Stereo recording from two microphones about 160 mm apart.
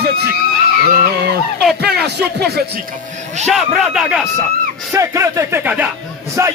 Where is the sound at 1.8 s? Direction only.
90° right.